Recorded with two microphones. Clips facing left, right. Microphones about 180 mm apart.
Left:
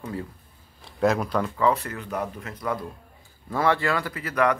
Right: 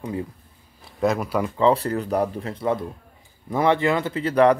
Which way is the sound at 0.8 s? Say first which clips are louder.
Even; centre (ahead or behind).